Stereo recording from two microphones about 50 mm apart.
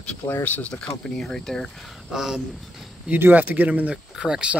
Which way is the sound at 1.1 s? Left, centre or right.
Centre.